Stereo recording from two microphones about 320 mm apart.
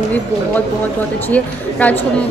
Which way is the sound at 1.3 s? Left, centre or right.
Centre.